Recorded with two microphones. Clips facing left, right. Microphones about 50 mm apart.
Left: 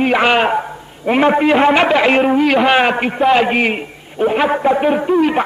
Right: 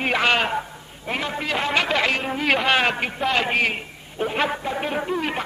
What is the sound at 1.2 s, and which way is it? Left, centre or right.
Speech, left.